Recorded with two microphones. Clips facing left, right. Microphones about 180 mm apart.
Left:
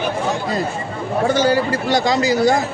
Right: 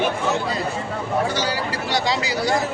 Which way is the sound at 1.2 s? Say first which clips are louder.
Left 8 dB; 50° left (ahead or behind).